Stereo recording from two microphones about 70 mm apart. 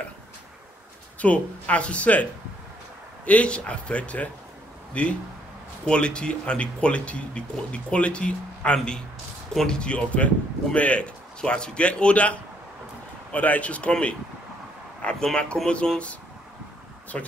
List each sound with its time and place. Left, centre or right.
1.2 s speech: centre
3.3 s speech: centre